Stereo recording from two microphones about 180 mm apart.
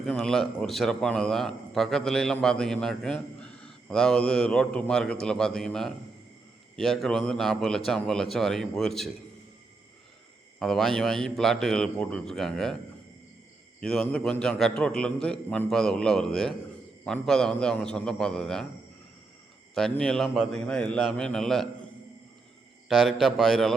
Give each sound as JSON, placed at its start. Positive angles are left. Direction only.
{"t": 0.0, "sound": "a man's voice", "side_deg": 0}
{"t": 10.6, "sound": "a man's voice", "side_deg": 0}
{"t": 13.8, "sound": "a man's voice", "side_deg": 5}
{"t": 19.7, "sound": "a man's voice", "side_deg": 5}
{"t": 22.9, "sound": "a man's voice", "side_deg": 0}